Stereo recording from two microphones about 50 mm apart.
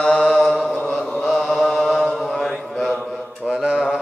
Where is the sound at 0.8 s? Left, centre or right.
Left.